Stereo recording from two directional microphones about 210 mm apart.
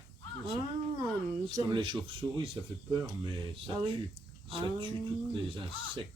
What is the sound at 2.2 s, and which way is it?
Speech, 10° right (ahead or behind).